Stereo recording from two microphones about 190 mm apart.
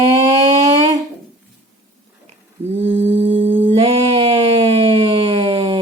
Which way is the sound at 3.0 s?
35° right (ahead or behind).